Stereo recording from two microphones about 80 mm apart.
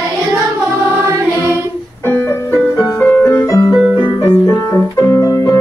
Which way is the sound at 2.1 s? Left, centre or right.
Left.